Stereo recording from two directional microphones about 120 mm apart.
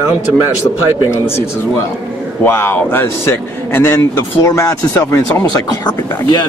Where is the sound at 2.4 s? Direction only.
20° left (ahead or behind).